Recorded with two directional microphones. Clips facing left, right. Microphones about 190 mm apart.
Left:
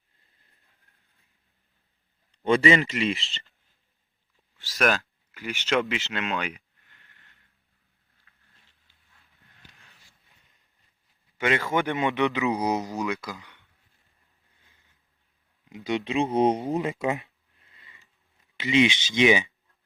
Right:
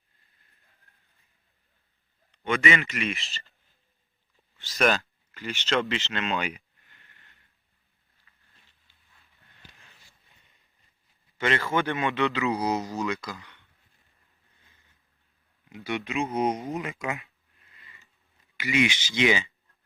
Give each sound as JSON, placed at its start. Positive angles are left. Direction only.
{"t": 2.3, "sound": "a man's voice", "side_deg": 30}
{"t": 4.5, "sound": "speech", "side_deg": 5}
{"t": 9.7, "sound": "a sound", "side_deg": 0}
{"t": 11.3, "sound": "speech", "side_deg": 10}
{"t": 15.7, "sound": "speech", "side_deg": 20}
{"t": 16.2, "sound": "a sound", "side_deg": 30}
{"t": 18.5, "sound": "speech", "side_deg": 25}